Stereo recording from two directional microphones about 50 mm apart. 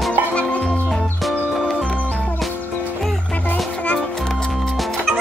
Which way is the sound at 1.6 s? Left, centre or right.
Centre.